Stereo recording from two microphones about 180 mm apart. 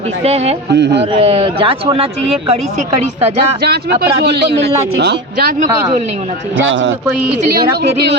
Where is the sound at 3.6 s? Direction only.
60° right (ahead or behind).